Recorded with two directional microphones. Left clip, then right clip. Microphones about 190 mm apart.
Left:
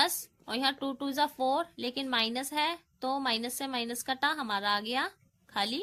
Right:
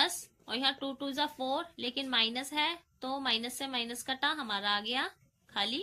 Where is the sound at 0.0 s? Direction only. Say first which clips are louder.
Left 2 dB; 60° left (ahead or behind).